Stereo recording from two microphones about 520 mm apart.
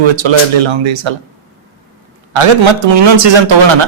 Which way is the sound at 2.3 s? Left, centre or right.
Right.